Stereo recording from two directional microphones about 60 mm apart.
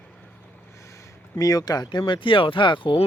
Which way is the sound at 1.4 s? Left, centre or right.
Left.